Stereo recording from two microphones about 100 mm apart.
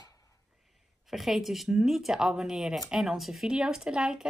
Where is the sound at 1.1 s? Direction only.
Centre (ahead or behind).